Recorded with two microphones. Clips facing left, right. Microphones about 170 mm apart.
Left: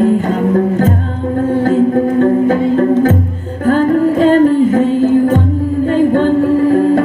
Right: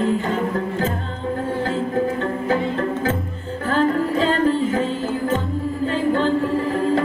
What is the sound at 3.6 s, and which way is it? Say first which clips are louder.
Music: left 9 dB; 50° left (ahead or behind).